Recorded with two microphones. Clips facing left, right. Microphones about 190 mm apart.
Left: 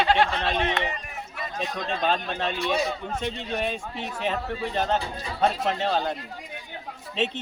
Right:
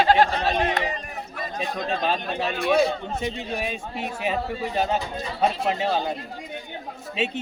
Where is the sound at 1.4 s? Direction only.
50° right (ahead or behind).